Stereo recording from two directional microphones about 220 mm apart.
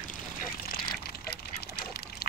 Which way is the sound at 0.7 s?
45° left (ahead or behind).